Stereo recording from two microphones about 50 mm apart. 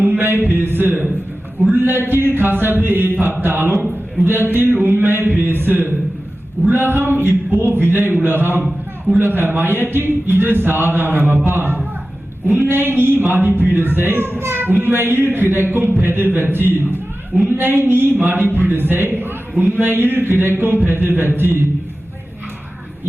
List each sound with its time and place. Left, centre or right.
0.6 s a man's voice: right